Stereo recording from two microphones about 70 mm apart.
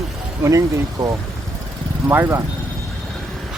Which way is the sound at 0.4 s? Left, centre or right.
Right.